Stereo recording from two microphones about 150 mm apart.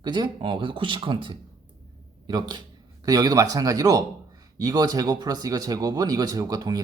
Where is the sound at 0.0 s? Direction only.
30° right (ahead or behind).